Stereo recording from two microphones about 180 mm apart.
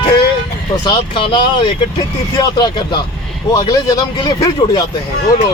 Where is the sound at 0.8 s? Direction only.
25° left (ahead or behind).